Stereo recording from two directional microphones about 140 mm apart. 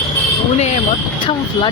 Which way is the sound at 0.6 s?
50° left (ahead or behind).